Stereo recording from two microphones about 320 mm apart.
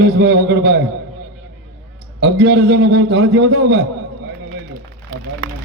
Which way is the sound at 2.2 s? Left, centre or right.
Right.